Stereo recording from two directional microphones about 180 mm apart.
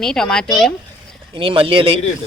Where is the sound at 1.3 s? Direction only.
30° right (ahead or behind).